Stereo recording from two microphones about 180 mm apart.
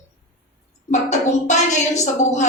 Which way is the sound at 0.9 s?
40° left (ahead or behind).